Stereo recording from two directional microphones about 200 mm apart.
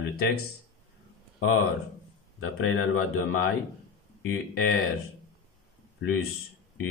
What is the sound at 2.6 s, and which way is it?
Speech, 90° left.